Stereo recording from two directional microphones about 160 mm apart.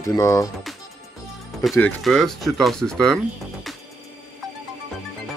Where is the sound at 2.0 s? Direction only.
Centre (ahead or behind).